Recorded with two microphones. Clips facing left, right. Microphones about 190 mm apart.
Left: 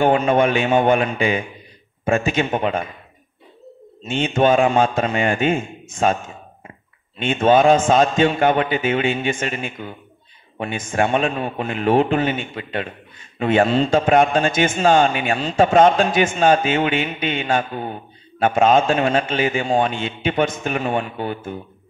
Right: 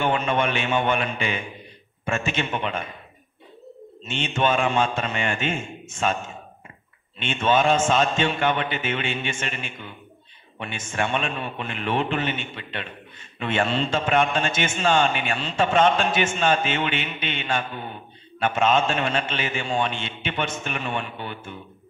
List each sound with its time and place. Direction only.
0.0 s a man's voice: 40° left (ahead or behind)
4.0 s a man's voice: 45° left (ahead or behind)
7.2 s a man's voice: 45° left (ahead or behind)